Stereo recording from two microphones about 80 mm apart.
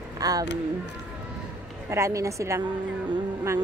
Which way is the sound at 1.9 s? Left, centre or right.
Right.